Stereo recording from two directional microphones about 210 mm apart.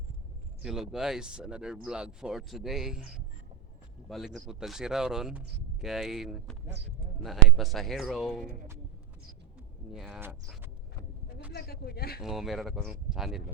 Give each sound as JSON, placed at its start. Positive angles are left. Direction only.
{"t": 0.6, "sound": "speech", "side_deg": 0}
{"t": 9.9, "sound": "speech", "side_deg": 0}
{"t": 11.5, "sound": "speech", "side_deg": 45}
{"t": 12.2, "sound": "speech", "side_deg": 0}